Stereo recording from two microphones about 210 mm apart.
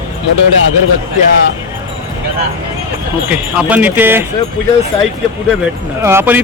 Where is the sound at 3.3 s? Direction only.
5° right (ahead or behind).